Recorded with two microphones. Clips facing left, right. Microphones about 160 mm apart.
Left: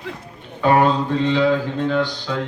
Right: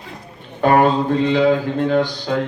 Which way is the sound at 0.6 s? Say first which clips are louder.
Right 2 dB; 50° right (ahead or behind).